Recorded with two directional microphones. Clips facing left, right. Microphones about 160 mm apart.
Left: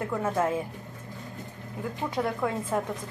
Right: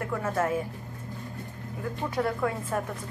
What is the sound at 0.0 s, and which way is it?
Speech, 15° left (ahead or behind).